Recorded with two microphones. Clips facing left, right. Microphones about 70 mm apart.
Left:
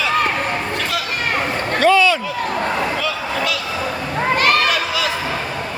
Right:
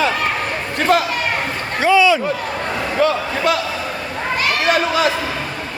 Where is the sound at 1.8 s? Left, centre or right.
Centre.